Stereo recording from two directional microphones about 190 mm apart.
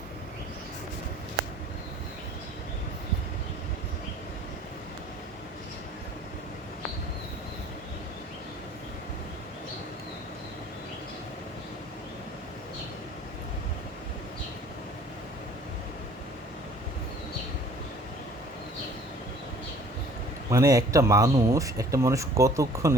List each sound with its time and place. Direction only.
20.5 s speech: 20° right (ahead or behind)